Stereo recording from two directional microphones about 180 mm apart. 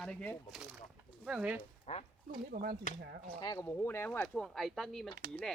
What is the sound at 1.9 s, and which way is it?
Speech, 35° left (ahead or behind).